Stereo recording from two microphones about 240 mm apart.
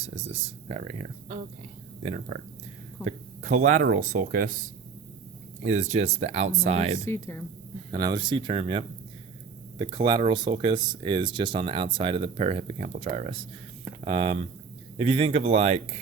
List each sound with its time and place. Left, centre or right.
0.0 s speech: right
7.0 s speech: centre
7.9 s speech: centre